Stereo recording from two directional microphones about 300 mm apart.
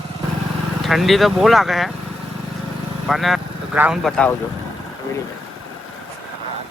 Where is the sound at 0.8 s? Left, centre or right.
Centre.